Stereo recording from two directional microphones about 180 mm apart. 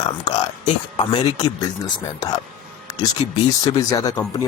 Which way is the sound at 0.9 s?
25° left (ahead or behind).